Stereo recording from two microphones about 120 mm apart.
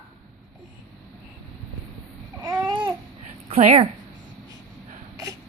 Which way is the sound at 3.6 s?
65° right (ahead or behind).